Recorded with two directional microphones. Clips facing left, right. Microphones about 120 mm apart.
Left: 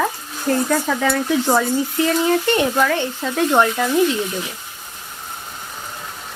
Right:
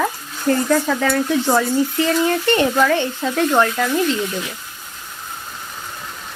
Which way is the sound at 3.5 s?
15° left (ahead or behind).